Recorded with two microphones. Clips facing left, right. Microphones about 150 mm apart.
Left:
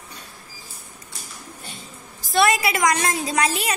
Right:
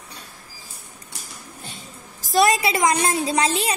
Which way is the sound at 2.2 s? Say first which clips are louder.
Right 1 dB; 35° right (ahead or behind).